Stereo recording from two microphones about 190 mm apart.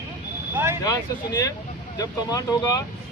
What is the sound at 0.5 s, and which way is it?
Vehicle, 15° right (ahead or behind).